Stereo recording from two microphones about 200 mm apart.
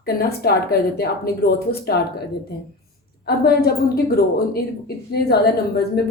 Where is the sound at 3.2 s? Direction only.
50° left (ahead or behind).